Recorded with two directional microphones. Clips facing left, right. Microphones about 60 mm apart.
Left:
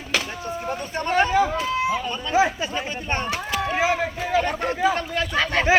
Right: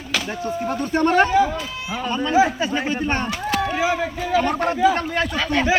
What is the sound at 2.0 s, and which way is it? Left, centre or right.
Speech, right.